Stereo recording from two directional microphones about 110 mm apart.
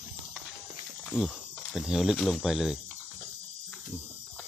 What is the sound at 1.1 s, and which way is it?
Speech, 15° left (ahead or behind).